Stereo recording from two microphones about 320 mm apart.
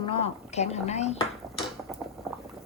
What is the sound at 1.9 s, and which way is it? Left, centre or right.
Liquid, centre.